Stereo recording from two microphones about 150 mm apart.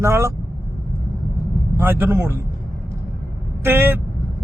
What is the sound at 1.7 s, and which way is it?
Speech, 15° right (ahead or behind).